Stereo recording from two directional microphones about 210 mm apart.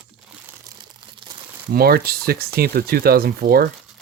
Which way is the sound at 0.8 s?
20° right (ahead or behind).